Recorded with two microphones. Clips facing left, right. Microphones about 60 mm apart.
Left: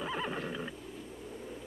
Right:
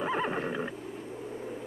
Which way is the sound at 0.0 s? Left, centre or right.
Right.